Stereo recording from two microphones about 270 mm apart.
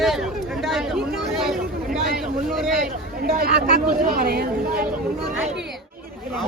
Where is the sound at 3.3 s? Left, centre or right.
Right.